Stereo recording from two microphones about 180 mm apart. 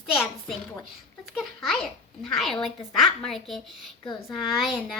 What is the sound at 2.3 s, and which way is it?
A child's voice, centre (ahead or behind).